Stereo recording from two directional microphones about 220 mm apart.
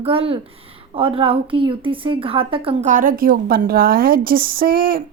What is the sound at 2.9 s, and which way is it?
A woman's voice, 40° right (ahead or behind).